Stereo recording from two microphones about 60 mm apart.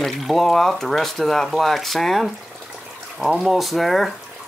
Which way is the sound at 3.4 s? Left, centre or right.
Centre.